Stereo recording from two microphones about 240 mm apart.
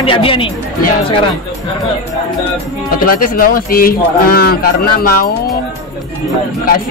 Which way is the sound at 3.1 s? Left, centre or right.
Left.